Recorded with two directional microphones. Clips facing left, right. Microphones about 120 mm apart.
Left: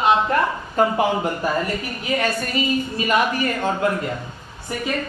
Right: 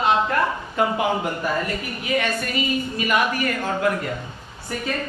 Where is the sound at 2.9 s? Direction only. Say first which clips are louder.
Left 1 dB; 30° left (ahead or behind).